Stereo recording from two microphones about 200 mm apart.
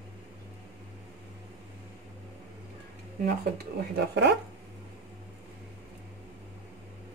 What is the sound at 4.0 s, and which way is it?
Speech, 60° right (ahead or behind).